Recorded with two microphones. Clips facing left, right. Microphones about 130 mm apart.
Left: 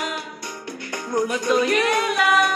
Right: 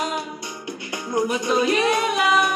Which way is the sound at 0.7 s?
10° right (ahead or behind).